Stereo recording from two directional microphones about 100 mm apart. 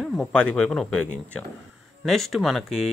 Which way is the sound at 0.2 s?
10° left (ahead or behind).